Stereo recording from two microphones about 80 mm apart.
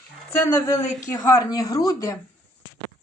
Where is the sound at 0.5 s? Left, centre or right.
Left.